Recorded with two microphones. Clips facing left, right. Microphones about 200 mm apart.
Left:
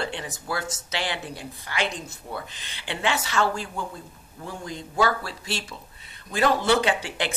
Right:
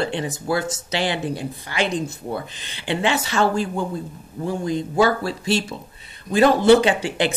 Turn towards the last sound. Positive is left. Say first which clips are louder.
# right 6 dB
turn(degrees=-25)  # may be behind; listen again after turning